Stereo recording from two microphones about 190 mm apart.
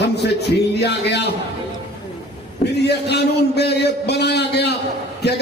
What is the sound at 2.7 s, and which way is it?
A man's voice, 60° left (ahead or behind).